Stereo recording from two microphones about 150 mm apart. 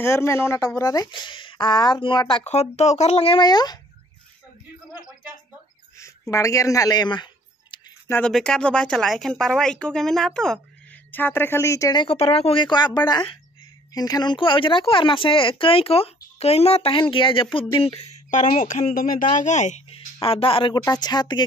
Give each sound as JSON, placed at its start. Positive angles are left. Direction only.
{"t": 0.0, "sound": "speech", "side_deg": 15}
{"t": 2.4, "sound": "speech", "side_deg": 45}
{"t": 6.3, "sound": "speech", "side_deg": 20}
{"t": 8.3, "sound": "speech", "side_deg": 5}
{"t": 18.9, "sound": "speech", "side_deg": 70}
{"t": 19.3, "sound": "a woman's voice", "side_deg": 55}